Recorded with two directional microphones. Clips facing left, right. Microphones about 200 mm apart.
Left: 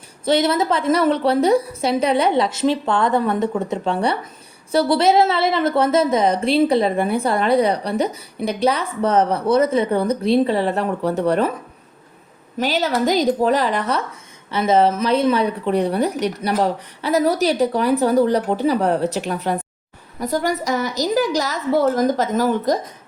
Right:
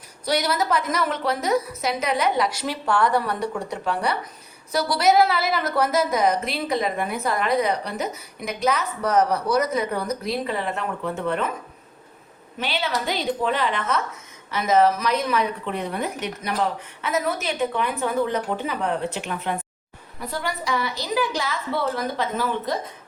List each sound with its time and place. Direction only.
0.3 s a woman's voice: 25° left (ahead or behind)
12.5 s a woman's voice: 40° left (ahead or behind)